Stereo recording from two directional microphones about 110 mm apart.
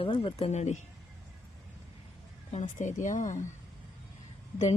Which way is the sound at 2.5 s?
90° left.